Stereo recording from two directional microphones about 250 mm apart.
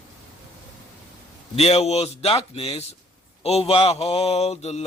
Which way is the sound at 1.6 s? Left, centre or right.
Left.